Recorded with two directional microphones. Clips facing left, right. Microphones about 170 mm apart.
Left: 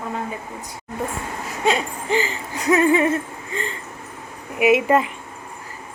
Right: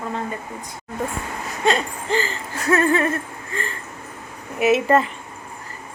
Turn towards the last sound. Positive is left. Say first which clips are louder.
# left 1 dB
turn(degrees=10)  # may be behind; listen again after turning